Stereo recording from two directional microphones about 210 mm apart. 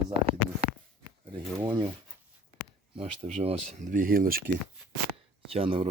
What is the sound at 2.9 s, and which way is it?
Speech, 30° right (ahead or behind).